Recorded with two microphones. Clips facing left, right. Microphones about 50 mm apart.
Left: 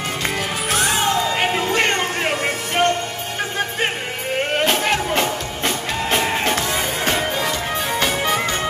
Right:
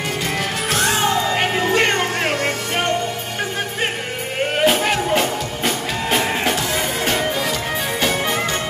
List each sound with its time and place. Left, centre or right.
0.7 s music: centre
4.6 s music: centre